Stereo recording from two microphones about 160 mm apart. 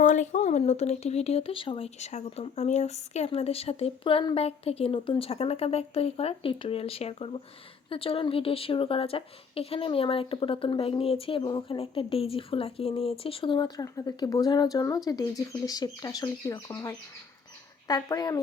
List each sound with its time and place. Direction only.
0.0 s a woman's voice: 55° left (ahead or behind); by 18.3 s 25° left (ahead or behind)